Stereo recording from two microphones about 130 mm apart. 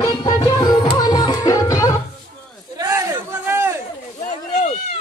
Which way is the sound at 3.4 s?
20° right (ahead or behind).